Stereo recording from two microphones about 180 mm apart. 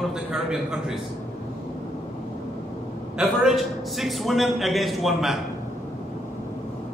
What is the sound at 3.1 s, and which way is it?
A man's voice, centre (ahead or behind).